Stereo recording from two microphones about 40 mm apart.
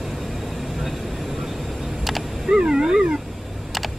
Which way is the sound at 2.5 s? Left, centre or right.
Centre.